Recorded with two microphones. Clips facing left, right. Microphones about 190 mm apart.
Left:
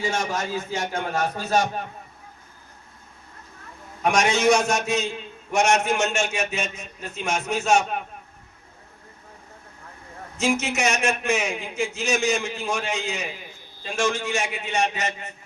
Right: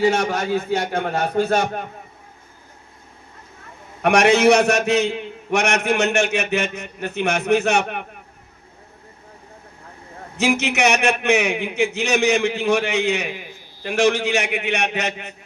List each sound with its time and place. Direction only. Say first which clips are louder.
0.0 s a man's voice: right 7 dB; 65° right (ahead or behind)
4.0 s a man's voice: right 6 dB; 65° right (ahead or behind)
10.3 s a man's voice: right 4 dB; 65° right (ahead or behind)